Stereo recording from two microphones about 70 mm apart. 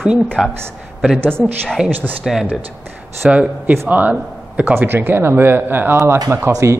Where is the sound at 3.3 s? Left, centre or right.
Centre.